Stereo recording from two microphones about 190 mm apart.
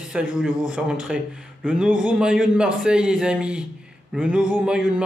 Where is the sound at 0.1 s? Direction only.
5° right (ahead or behind).